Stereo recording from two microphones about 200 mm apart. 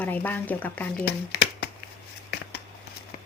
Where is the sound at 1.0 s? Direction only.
55° left (ahead or behind).